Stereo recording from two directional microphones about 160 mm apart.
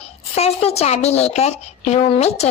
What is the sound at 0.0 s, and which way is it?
A woman's voice, 40° left (ahead or behind).